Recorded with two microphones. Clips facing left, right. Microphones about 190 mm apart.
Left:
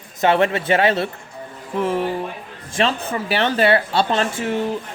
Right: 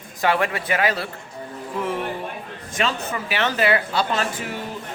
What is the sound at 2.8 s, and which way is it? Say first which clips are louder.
Speech: left 4 dB; 30° left (ahead or behind).